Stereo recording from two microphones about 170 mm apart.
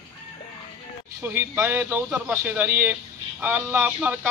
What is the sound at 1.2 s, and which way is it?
Speech, 15° right (ahead or behind).